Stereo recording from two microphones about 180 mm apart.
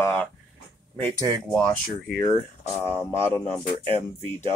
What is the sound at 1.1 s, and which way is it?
Speech, 20° right (ahead or behind).